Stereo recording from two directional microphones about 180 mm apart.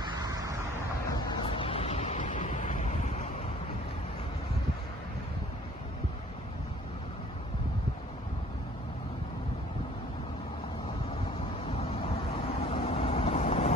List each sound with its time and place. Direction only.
0.0 s vehicle: 20° right (ahead or behind)
1.4 s vehicle: 30° left (ahead or behind)
11.6 s vehicle: 35° left (ahead or behind)